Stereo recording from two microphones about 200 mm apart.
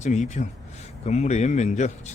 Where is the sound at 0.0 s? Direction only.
35° left (ahead or behind).